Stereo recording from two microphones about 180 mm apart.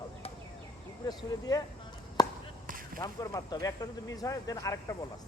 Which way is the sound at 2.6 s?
50° right (ahead or behind).